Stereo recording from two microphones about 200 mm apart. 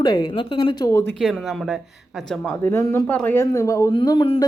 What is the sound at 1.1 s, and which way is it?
Speech, centre (ahead or behind).